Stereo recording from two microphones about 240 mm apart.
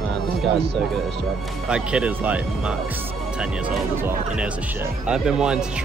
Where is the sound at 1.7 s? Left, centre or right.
Centre.